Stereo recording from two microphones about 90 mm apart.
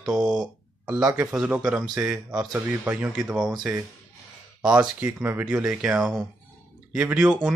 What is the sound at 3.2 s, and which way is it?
Speech, 5° right (ahead or behind).